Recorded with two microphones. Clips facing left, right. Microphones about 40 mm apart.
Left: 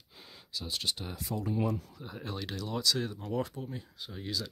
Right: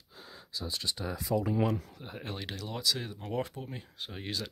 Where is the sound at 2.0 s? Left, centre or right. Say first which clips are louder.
Left 1 dB; right.